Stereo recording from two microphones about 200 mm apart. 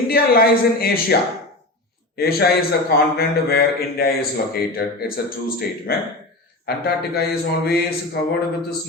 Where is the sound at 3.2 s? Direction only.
50° left (ahead or behind).